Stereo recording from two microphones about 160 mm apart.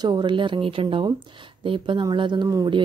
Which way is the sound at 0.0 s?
30° right (ahead or behind).